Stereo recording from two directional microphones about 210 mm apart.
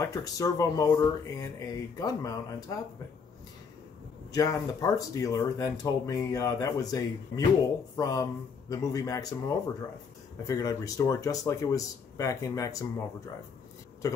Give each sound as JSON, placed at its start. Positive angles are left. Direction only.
{"t": 0.0, "sound": "speech", "side_deg": 15}
{"t": 4.3, "sound": "speech", "side_deg": 15}